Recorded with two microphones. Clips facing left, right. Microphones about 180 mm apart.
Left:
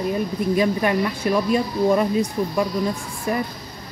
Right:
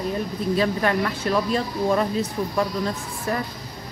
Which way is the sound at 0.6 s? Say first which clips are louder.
Left 2 dB; 15° left (ahead or behind).